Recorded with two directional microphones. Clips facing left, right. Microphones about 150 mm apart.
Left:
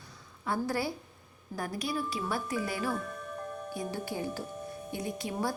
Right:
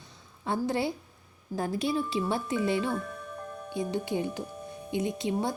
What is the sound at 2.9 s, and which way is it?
Music, centre (ahead or behind).